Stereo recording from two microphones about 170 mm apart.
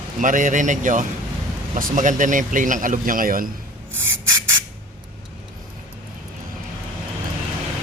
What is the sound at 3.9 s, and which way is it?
Rub, 15° right (ahead or behind).